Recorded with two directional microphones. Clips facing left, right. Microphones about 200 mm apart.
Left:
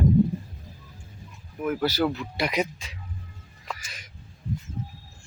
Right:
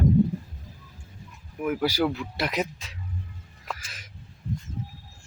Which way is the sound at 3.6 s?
5° right (ahead or behind).